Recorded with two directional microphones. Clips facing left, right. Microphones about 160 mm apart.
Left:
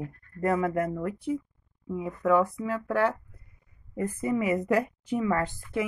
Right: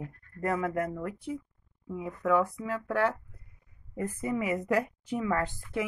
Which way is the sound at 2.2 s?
35° left (ahead or behind).